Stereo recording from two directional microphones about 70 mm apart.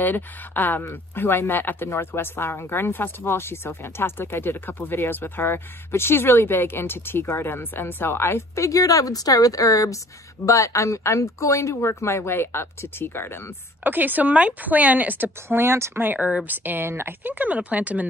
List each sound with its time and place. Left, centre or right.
0.0 s speech: left
13.8 s speech: right
15.4 s speech: right